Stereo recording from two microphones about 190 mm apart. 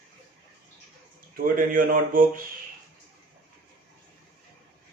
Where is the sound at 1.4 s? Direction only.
50° right (ahead or behind).